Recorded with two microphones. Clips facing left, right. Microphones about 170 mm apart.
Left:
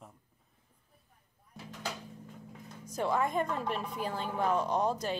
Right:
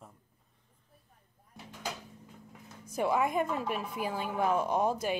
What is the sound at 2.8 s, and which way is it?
A woman's voice, 10° right (ahead or behind).